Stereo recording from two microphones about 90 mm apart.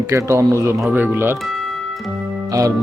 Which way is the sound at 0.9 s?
20° right (ahead or behind).